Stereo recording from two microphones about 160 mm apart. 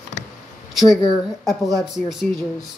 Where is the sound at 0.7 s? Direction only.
Centre (ahead or behind).